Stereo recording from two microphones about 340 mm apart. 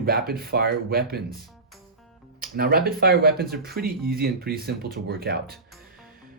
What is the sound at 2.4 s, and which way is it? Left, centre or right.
Speech, right.